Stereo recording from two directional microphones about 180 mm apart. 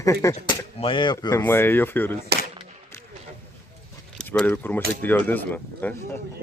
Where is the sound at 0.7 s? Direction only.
30° left (ahead or behind); by 2.2 s 10° left (ahead or behind).